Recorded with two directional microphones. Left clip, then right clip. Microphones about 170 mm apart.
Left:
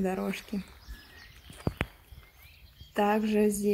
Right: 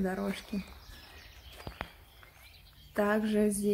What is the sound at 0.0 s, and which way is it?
Speech, 20° left (ahead or behind).